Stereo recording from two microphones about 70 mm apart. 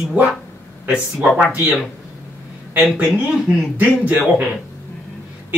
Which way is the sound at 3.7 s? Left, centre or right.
Right.